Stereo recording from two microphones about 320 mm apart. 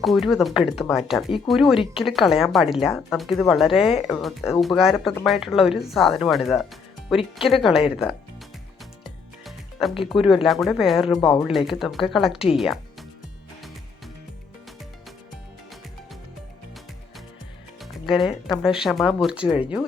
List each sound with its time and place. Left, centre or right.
0.0 s speech: centre
9.4 s music: centre
10.1 s speech: centre
17.7 s music: centre
18.6 s speech: centre
19.4 s speech: centre